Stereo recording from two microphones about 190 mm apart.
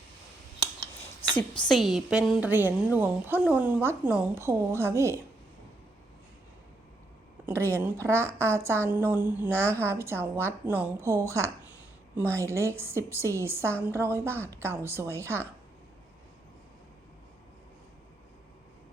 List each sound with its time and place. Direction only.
1.2 s a sound: 25° left (ahead or behind)
1.6 s a woman's voice: centre (ahead or behind)
7.4 s a woman's voice: 15° right (ahead or behind)